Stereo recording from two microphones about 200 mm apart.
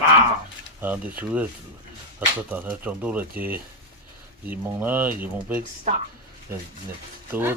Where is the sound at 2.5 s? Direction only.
10° right (ahead or behind).